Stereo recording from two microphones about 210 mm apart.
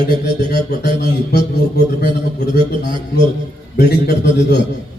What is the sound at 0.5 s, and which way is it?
A man's voice, 50° left (ahead or behind).